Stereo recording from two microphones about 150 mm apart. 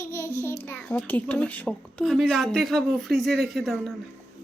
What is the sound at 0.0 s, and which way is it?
Child singing, 20° left (ahead or behind).